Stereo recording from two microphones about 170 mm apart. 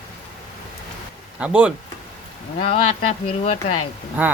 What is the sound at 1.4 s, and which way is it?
Speech, 5° right (ahead or behind).